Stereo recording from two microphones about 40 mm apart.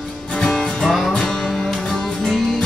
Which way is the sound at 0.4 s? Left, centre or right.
Centre.